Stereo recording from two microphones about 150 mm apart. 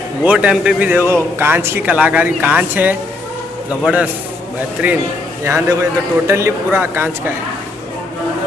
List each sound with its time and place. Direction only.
0.2 s a man's voice: 10° right (ahead or behind)